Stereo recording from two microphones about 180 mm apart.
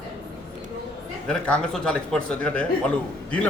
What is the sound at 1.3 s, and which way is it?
A man's voice, 5° left (ahead or behind).